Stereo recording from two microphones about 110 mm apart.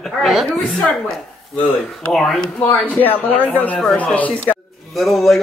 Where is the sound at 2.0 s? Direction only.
Centre (ahead or behind).